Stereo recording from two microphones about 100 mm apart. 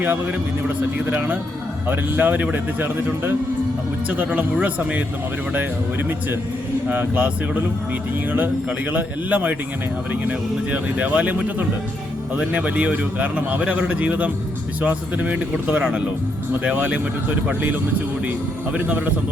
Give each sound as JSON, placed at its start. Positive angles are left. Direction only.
{"t": 0.0, "sound": "speech", "side_deg": -20}
{"t": 8.9, "sound": "speech", "side_deg": -15}